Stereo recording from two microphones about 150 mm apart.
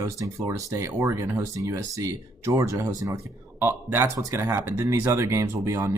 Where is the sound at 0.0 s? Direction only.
20° right (ahead or behind).